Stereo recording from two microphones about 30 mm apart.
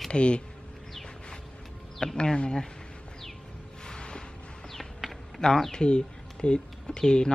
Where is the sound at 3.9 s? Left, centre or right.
Left.